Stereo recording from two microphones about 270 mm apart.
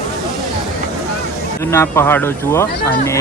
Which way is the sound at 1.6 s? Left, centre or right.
Centre.